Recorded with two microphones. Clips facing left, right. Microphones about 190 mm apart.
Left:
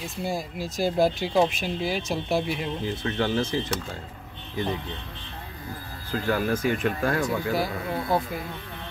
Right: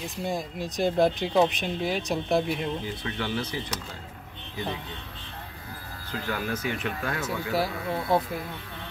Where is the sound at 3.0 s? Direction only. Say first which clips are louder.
Left 6 dB; 45° left (ahead or behind).